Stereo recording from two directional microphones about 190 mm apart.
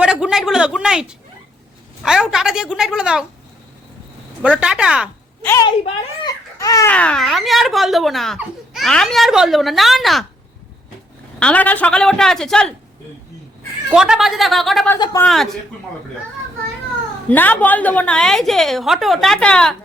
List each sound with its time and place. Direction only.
0.0 s speech: 5° right (ahead or behind)
4.6 s speech: 5° right (ahead or behind)
5.4 s a woman's voice: 10° left (ahead or behind)
5.6 s a child's voice: 20° left (ahead or behind)
6.9 s speech: 5° left (ahead or behind)
11.3 s speech: 5° left (ahead or behind)
13.9 s speech: 5° right (ahead or behind)
14.9 s a man's voice: 20° left (ahead or behind)
15.2 s speech: centre (ahead or behind)
17.2 s speech: 10° left (ahead or behind)